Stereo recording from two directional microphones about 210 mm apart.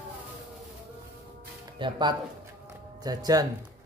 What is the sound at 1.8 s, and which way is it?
Speech, 20° right (ahead or behind).